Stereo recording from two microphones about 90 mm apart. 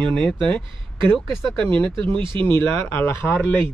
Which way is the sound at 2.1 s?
65° right (ahead or behind).